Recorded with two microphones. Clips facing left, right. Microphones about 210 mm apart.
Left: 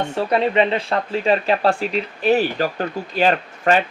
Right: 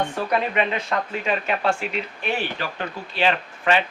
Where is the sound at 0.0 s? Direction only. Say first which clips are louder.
Left 4 dB; 30° left (ahead or behind).